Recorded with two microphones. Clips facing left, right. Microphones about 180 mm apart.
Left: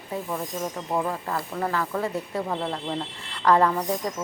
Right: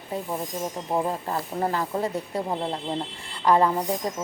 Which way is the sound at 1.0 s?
25° right (ahead or behind).